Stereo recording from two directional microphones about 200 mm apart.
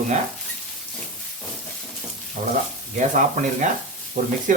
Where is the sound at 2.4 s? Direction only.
35° right (ahead or behind).